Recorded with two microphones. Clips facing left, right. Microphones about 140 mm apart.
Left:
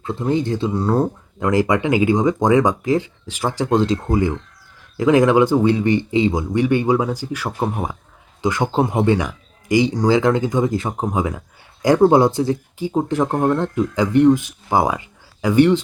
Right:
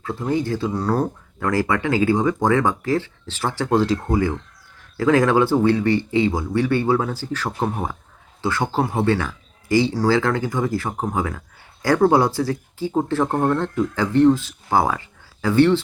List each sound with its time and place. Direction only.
0.0 s speech: 20° left (ahead or behind)